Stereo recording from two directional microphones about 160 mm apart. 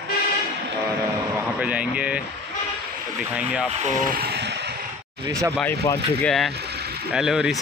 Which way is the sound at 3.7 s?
45° right (ahead or behind).